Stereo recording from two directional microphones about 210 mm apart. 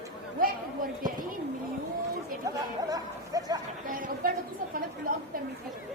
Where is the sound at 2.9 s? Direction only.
15° right (ahead or behind).